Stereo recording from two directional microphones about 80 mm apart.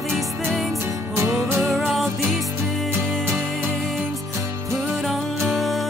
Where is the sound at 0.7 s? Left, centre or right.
Right.